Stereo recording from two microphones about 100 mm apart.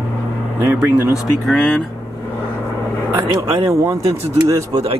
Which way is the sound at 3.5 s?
30° right (ahead or behind).